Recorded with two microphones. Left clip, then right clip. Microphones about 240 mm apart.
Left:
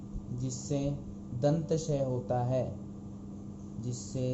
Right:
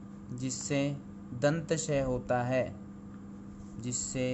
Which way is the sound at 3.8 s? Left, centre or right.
Right.